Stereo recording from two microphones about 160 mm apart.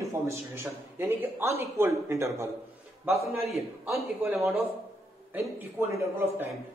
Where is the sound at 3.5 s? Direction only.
Centre (ahead or behind).